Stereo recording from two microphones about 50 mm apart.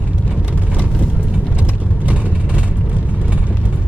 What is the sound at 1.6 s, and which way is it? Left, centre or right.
Vehicle, right.